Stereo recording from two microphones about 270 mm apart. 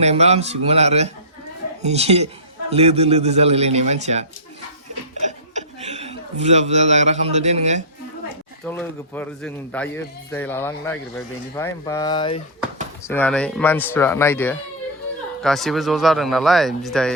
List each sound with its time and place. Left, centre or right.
0.0 s a man's voice: right
5.5 s a man's voice: right
8.6 s a man's voice: centre
13.1 s a man's voice: centre